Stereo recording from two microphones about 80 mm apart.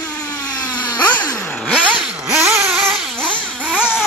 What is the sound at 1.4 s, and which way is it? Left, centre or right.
Vehicle, centre.